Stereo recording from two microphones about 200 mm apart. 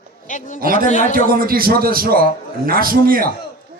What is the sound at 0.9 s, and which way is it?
Speech, 35° left (ahead or behind).